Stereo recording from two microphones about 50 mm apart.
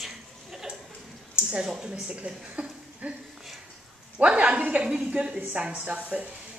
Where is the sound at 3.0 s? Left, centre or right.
Right.